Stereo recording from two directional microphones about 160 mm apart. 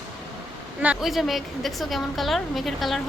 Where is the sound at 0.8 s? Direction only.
5° right (ahead or behind).